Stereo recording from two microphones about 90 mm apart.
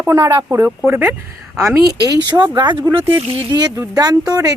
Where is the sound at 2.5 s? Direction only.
60° right (ahead or behind).